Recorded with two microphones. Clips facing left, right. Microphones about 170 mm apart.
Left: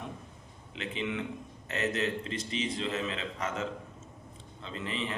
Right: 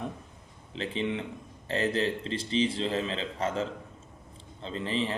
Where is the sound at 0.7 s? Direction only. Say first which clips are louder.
Right 4 dB; 30° right (ahead or behind).